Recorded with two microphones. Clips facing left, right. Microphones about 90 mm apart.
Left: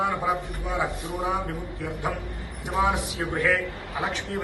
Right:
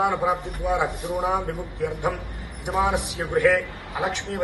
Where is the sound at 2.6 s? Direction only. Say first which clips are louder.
Right 1 dB; 20° right (ahead or behind).